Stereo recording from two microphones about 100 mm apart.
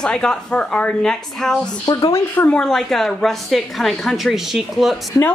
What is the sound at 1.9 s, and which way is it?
Speech, 45° left (ahead or behind).